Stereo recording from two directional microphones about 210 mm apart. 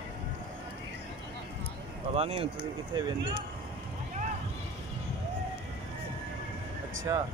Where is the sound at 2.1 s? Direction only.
30° right (ahead or behind).